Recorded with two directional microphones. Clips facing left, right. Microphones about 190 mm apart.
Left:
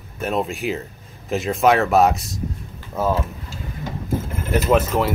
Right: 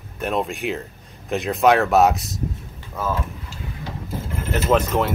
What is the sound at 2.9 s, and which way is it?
Speech, 25° left (ahead or behind).